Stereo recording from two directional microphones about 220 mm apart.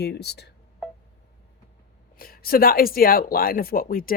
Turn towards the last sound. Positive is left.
turn(degrees=40)  # may be behind; listen again after turning